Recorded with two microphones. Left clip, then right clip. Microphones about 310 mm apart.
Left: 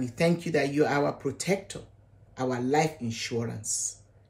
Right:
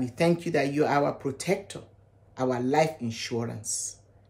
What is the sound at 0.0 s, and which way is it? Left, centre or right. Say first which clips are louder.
Speech: right 1 dB; centre.